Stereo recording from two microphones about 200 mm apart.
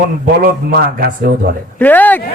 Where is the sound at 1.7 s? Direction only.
10° left (ahead or behind).